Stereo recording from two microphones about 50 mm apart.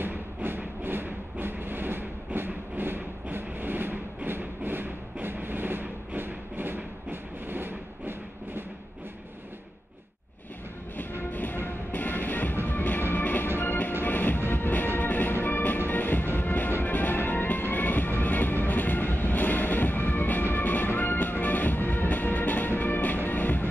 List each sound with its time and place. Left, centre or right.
0.0 s music: right
5.2 s a sound: right
11.3 s music: left